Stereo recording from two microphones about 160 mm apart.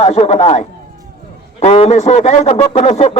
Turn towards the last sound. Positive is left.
turn(degrees=40)  # may be behind; listen again after turning